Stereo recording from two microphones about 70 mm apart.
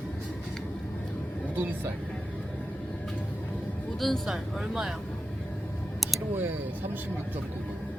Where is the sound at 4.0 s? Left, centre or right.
Centre.